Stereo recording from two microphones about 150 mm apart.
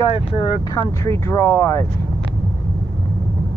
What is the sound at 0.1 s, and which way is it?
Speech, 35° left (ahead or behind).